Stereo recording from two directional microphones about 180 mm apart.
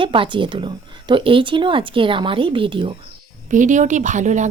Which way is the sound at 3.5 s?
45° right (ahead or behind).